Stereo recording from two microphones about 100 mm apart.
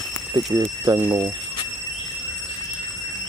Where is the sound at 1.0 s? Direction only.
40° right (ahead or behind).